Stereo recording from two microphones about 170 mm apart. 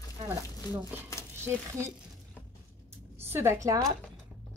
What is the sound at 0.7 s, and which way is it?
Speech, 25° left (ahead or behind).